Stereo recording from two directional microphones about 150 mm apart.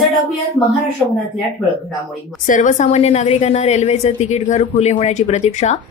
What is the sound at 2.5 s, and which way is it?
A woman's voice, 55° left (ahead or behind).